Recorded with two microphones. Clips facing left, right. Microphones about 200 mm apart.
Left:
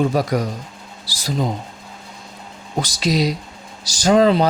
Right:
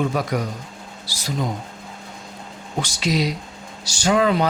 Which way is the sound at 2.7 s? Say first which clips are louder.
Left 3 dB; 35° left (ahead or behind).